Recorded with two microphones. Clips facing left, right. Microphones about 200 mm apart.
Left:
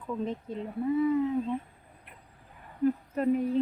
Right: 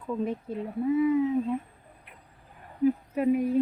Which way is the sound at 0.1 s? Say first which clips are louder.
Right 3 dB; 10° right (ahead or behind).